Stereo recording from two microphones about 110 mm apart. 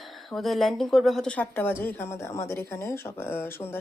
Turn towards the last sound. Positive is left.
turn(degrees=20)  # may be behind; listen again after turning